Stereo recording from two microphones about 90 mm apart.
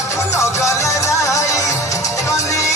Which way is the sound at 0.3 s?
35° left (ahead or behind).